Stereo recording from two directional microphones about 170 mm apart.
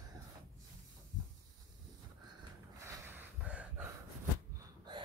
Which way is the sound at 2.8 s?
15° right (ahead or behind).